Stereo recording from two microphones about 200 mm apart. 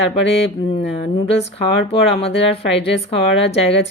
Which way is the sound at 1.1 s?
30° left (ahead or behind).